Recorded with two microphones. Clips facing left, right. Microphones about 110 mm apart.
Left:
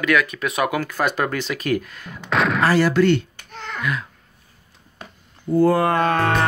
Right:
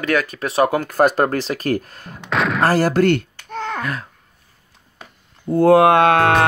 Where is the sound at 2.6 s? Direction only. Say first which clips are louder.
Right 2 dB; 45° right (ahead or behind).